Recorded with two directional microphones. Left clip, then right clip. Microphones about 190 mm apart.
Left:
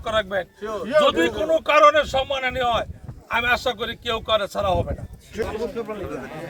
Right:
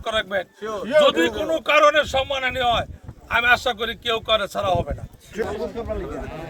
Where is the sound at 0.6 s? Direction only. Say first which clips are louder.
Even; 30° right (ahead or behind).